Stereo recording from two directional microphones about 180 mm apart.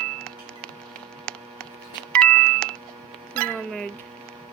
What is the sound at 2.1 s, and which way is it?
Doorbell, 5° left (ahead or behind).